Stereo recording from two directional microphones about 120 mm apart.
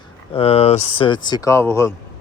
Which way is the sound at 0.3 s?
60° left (ahead or behind).